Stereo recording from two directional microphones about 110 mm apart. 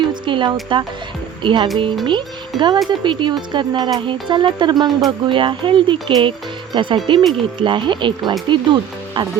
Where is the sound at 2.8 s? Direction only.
45° right (ahead or behind).